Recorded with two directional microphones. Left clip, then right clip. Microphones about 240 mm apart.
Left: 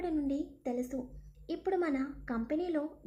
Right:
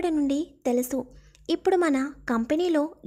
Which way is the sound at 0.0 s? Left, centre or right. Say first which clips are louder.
Right 9 dB; right.